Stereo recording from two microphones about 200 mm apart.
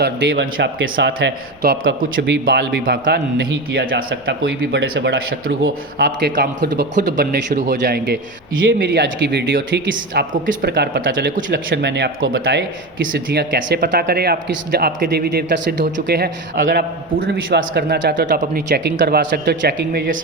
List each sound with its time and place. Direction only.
0.0 s a man's voice: 60° right (ahead or behind)
2.0 s a man's voice: 45° right (ahead or behind)
2.3 s a man's voice: 55° right (ahead or behind)
7.2 s speech: 40° right (ahead or behind)
7.8 s a man's voice: 55° right (ahead or behind)
8.6 s a man's voice: 65° right (ahead or behind)
10.3 s a man's voice: 40° right (ahead or behind); by 11.3 s 60° right (ahead or behind)
11.3 s speech: 40° right (ahead or behind)
11.7 s a man's voice: 60° right (ahead or behind)
18.7 s a man's voice: 55° right (ahead or behind)